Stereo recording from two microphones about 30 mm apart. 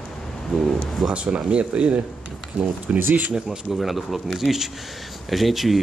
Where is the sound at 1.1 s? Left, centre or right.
Right.